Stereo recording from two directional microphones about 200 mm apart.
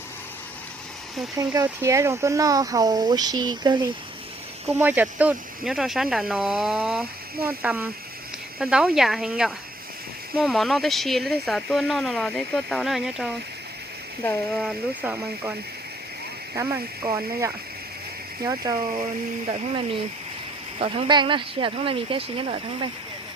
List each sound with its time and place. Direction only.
1.4 s speech: 15° right (ahead or behind)
4.8 s speech: 10° right (ahead or behind)
16.6 s speech: 15° right (ahead or behind)
19.5 s speech: 30° right (ahead or behind)